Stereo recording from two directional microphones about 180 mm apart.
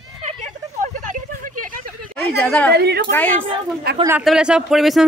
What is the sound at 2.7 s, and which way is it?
Speech, 65° right (ahead or behind).